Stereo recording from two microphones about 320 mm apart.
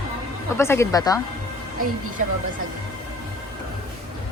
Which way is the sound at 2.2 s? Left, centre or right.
Right.